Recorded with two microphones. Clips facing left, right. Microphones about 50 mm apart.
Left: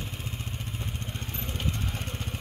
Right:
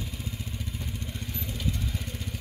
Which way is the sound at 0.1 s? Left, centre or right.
Left.